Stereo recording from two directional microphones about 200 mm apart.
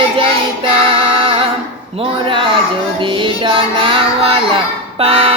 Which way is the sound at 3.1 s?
25° right (ahead or behind).